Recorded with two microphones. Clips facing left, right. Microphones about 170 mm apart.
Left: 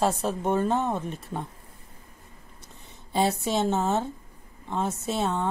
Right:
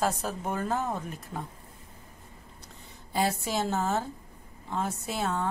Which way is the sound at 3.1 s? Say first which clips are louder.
Left 4 dB; 25° left (ahead or behind).